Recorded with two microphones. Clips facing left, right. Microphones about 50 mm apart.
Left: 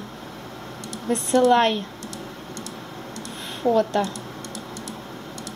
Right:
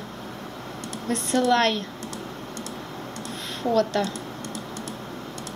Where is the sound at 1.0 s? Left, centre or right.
Centre.